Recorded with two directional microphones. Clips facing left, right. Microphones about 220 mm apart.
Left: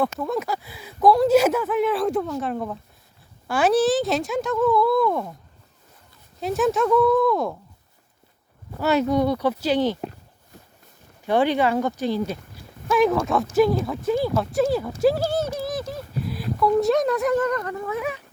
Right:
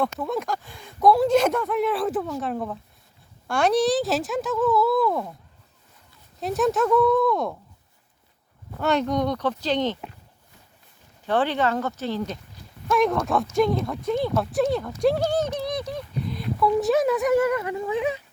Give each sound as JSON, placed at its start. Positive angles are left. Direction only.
{"t": 0.0, "sound": "speech", "side_deg": 0}
{"t": 6.4, "sound": "speech", "side_deg": 0}
{"t": 8.8, "sound": "speech", "side_deg": 5}
{"t": 11.3, "sound": "speech", "side_deg": 10}
{"t": 17.8, "sound": "speech", "side_deg": -20}